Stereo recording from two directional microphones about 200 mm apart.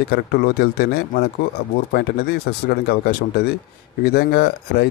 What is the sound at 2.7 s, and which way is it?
Speech, 50° left (ahead or behind).